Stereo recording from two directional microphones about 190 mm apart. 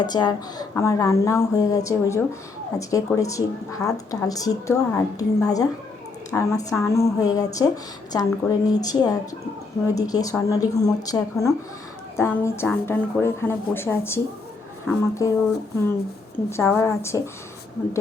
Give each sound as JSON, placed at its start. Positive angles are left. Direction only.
{"t": 0.0, "sound": "a woman's voice", "side_deg": 20}
{"t": 16.5, "sound": "a woman's voice", "side_deg": 15}